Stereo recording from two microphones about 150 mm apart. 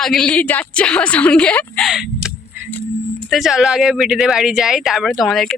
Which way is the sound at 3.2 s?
Centre (ahead or behind).